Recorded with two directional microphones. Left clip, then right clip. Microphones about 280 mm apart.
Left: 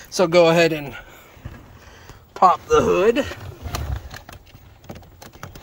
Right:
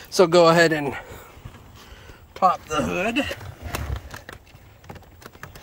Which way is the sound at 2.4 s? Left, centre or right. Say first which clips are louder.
Left 5 dB; centre.